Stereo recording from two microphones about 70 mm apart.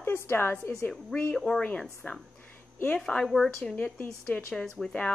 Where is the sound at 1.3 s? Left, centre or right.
Centre.